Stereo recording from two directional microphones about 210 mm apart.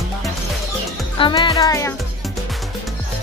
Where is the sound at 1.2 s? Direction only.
25° left (ahead or behind).